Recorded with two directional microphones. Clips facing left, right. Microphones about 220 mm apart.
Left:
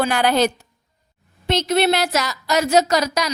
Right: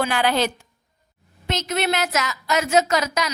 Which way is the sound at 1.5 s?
30° left (ahead or behind).